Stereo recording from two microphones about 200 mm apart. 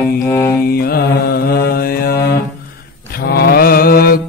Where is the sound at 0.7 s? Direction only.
50° left (ahead or behind).